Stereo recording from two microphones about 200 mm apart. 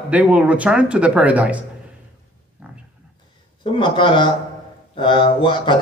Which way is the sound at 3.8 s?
25° left (ahead or behind).